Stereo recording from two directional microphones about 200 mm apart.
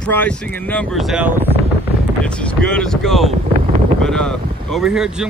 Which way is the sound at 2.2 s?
5° left (ahead or behind).